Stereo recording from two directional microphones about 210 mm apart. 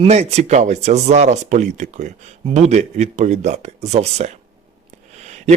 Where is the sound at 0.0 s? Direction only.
30° right (ahead or behind).